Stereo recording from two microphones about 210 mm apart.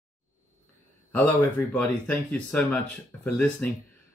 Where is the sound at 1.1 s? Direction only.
10° left (ahead or behind).